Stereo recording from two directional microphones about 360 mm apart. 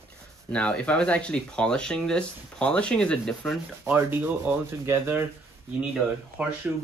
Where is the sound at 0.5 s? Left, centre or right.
Centre.